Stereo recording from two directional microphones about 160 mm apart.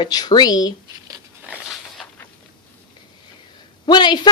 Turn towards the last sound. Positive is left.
turn(degrees=30)  # may be behind; listen again after turning